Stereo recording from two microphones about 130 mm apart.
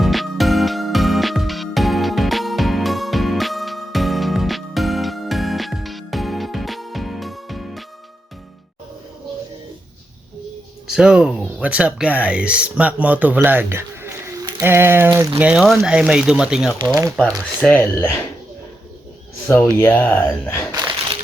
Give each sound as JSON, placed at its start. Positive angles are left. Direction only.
{"t": 0.0, "sound": "music", "side_deg": 0}
{"t": 10.8, "sound": "speech", "side_deg": -5}
{"t": 15.4, "sound": "speech", "side_deg": -10}
{"t": 17.6, "sound": "speech", "side_deg": 10}
{"t": 19.5, "sound": "speech", "side_deg": 15}